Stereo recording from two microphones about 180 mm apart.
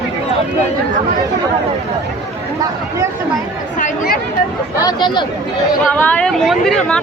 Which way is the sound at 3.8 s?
50° left (ahead or behind).